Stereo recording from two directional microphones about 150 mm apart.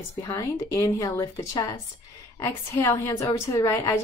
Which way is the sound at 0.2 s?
20° left (ahead or behind).